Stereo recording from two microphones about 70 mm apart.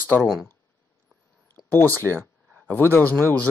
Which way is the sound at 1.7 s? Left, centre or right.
Left.